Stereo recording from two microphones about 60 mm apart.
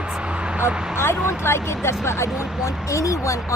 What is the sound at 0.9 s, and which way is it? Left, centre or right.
Speech, left.